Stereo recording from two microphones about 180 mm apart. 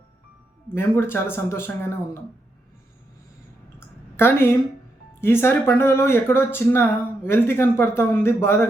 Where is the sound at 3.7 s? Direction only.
15° left (ahead or behind).